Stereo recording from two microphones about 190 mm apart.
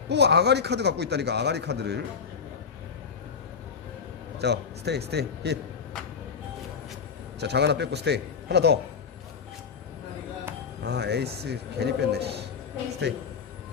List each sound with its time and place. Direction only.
0.1 s a man's voice: 60° right (ahead or behind)
4.4 s a man's voice: 60° right (ahead or behind)
7.3 s a man's voice: 60° right (ahead or behind)
10.8 s a man's voice: 60° right (ahead or behind)